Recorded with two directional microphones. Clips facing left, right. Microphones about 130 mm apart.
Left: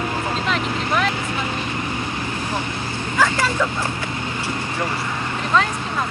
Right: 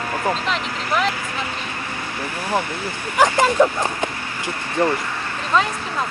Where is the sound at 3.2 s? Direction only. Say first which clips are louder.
Right 4 dB; 20° right (ahead or behind).